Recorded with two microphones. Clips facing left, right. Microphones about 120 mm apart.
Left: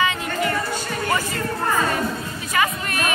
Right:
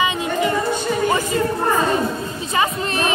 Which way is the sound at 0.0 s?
20° right (ahead or behind).